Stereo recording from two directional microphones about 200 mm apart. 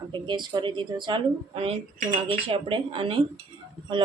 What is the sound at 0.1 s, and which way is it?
Speech, 25° right (ahead or behind).